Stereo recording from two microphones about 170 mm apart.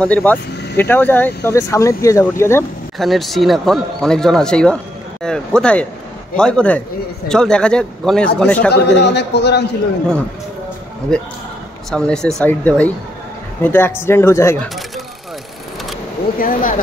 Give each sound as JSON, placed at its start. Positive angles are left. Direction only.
{"t": 0.0, "sound": "speech", "side_deg": 10}
{"t": 3.0, "sound": "speech", "side_deg": 0}
{"t": 8.7, "sound": "a man's voice", "side_deg": 90}
{"t": 11.1, "sound": "speech", "side_deg": 5}
{"t": 16.3, "sound": "speech", "side_deg": 55}